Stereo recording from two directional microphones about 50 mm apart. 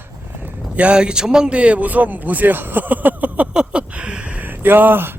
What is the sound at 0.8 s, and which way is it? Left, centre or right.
Speech, right.